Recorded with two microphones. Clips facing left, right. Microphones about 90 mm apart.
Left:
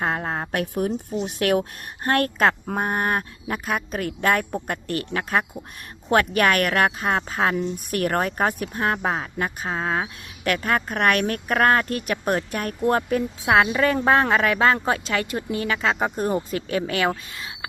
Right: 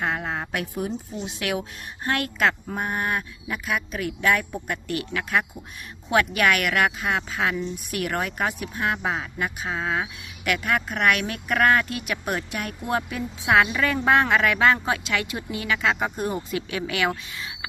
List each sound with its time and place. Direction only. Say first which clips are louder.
0.0 s speech: left 2 dB; 40° left (ahead or behind)